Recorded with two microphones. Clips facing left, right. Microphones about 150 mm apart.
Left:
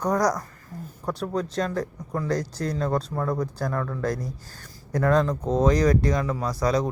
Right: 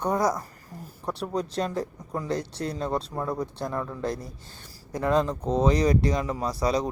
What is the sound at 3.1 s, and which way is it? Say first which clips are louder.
Speech: left 3 dB; 10° right (ahead or behind).